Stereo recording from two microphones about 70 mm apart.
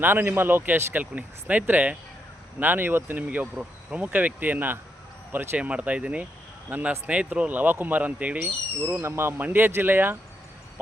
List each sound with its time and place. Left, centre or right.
0.0 s speech: right
9.0 s speech: right
9.4 s speech: right